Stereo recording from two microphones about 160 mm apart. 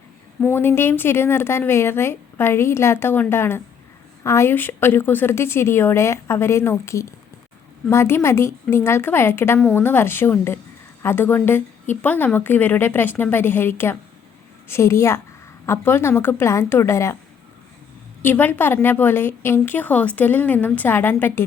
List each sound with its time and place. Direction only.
0.4 s a woman's voice: 15° left (ahead or behind)
18.2 s a woman's voice: 10° left (ahead or behind)